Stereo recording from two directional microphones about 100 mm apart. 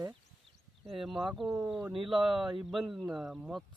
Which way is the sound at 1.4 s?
15° right (ahead or behind).